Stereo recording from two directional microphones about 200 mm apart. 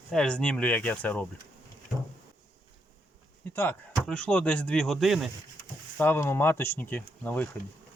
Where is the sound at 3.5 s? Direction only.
10° left (ahead or behind).